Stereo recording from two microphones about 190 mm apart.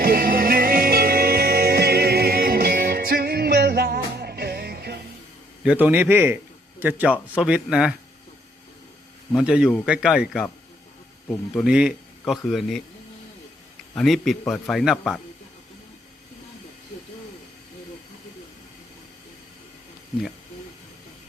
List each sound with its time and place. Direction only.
0.0 s music: 50° right (ahead or behind)
5.6 s a man's voice: 10° right (ahead or behind)
9.3 s a man's voice: 5° right (ahead or behind)
11.5 s a man's voice: 5° right (ahead or behind)
14.0 s a man's voice: centre (ahead or behind)